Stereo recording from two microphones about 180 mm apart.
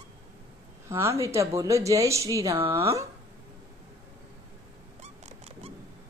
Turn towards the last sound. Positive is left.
turn(degrees=-35)  # may be behind; listen again after turning